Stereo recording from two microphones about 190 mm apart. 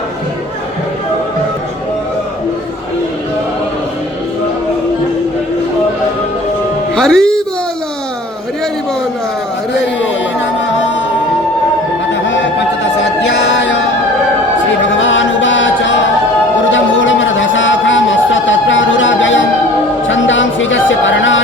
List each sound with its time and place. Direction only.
6.9 s music: 5° left (ahead or behind)
13.2 s music: 65° left (ahead or behind)
15.0 s chant: 80° left
16.7 s a sound: 90° left
20.1 s music: 85° left